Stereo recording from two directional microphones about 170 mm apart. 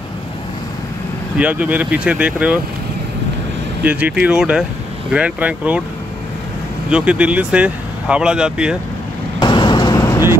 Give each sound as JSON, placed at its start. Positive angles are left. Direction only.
{"t": 1.4, "sound": "speech", "side_deg": -10}
{"t": 3.8, "sound": "speech", "side_deg": -10}
{"t": 6.9, "sound": "speech", "side_deg": -5}
{"t": 9.4, "sound": "vehicle", "side_deg": 25}